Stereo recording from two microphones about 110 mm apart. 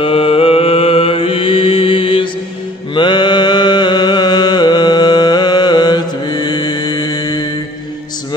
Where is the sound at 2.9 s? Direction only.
45° left (ahead or behind).